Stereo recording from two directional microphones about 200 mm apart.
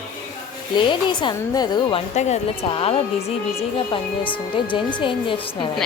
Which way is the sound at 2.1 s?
35° left (ahead or behind).